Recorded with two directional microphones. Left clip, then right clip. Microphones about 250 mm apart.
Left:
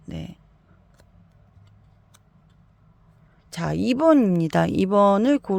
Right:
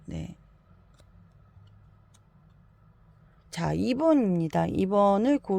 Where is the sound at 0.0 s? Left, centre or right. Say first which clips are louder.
Left 3 dB; centre.